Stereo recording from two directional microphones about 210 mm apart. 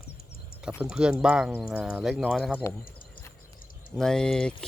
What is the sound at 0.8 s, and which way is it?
Speech, 5° right (ahead or behind).